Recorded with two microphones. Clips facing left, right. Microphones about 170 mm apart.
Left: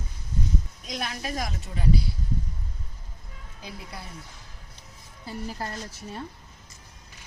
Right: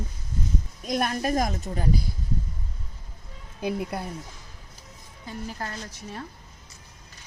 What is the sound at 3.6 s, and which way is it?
Speech, 55° right (ahead or behind).